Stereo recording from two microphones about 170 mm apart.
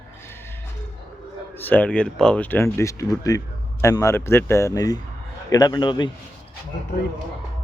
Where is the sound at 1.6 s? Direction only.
10° left (ahead or behind); by 6.1 s 25° left (ahead or behind).